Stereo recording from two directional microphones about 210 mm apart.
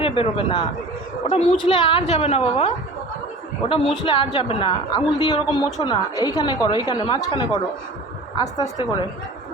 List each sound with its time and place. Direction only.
0.0 s a woman's voice: 25° left (ahead or behind)